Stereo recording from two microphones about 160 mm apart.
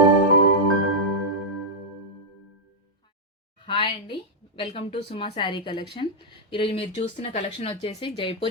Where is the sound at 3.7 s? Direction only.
30° left (ahead or behind).